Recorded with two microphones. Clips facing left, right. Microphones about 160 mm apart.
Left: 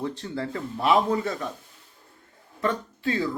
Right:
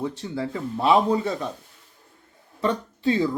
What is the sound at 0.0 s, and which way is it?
Speech, 15° right (ahead or behind).